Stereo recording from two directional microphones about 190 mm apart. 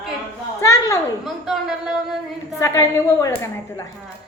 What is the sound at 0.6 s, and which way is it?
Speech, 15° left (ahead or behind).